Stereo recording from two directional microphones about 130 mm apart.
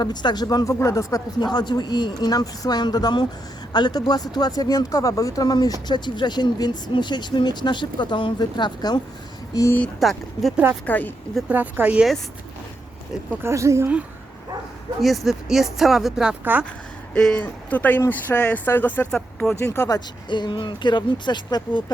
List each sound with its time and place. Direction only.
0.0 s speech: 35° left (ahead or behind)
10.0 s speech: centre (ahead or behind)
10.8 s speech: 15° left (ahead or behind)
11.5 s speech: 10° right (ahead or behind)
13.4 s a woman's voice: 20° right (ahead or behind)
15.0 s speech: centre (ahead or behind)
16.4 s speech: 15° right (ahead or behind)
17.2 s speech: 5° left (ahead or behind)
19.5 s speech: 20° left (ahead or behind)
20.3 s speech: 35° left (ahead or behind)